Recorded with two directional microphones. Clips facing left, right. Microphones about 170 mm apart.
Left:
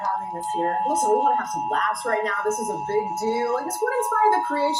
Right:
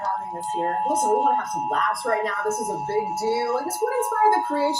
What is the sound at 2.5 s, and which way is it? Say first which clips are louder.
Speech: left 1 dB; 10° right (ahead or behind).